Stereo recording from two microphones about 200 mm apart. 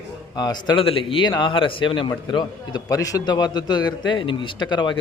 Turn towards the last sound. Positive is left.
turn(degrees=20)  # may be behind; listen again after turning